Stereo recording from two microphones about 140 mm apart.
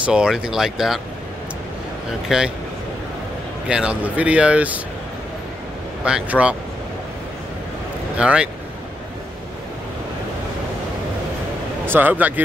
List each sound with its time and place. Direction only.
0.0 s speech: 5° right (ahead or behind)
2.2 s speech: 5° right (ahead or behind)
3.6 s speech: 5° right (ahead or behind)
6.0 s speech: 10° right (ahead or behind)
8.2 s speech: 5° right (ahead or behind)
11.8 s speech: 15° right (ahead or behind)